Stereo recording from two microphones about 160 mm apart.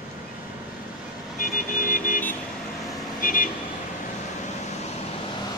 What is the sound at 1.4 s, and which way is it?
Vehicle, 55° left (ahead or behind).